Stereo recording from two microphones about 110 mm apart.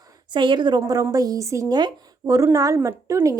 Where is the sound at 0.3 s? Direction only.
45° right (ahead or behind).